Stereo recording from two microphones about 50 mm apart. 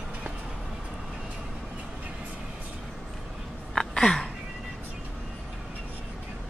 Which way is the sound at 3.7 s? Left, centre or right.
Centre.